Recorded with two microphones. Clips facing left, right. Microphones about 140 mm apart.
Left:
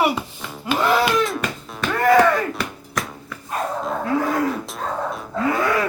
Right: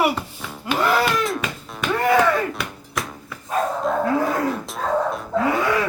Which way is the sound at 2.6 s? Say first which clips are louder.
Left 1 dB; centre (ahead or behind).